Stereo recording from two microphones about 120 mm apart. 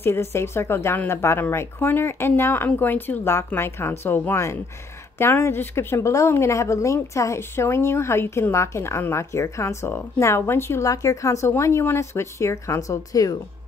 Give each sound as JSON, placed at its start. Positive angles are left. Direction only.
{"t": 0.0, "sound": "speech", "side_deg": 20}